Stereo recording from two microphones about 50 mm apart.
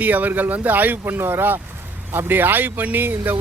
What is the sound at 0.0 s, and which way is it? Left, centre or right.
Speech, right.